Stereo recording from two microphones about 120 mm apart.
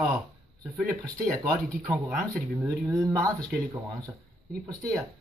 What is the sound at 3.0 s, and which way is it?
Speech, 25° right (ahead or behind).